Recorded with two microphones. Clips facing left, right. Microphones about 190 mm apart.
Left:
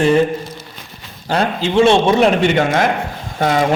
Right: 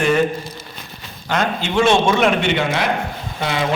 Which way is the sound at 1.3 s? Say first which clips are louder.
Left 4 dB; 30° left (ahead or behind).